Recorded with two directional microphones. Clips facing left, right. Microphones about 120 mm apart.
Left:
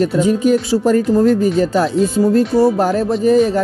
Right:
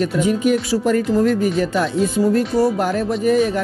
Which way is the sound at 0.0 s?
35° left (ahead or behind).